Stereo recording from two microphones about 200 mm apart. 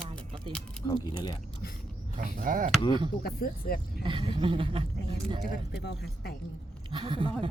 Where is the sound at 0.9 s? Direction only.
20° left (ahead or behind).